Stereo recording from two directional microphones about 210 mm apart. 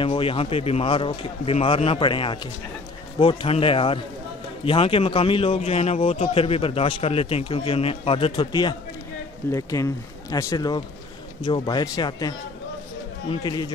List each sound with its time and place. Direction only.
0.0 s a man's voice: 25° left (ahead or behind)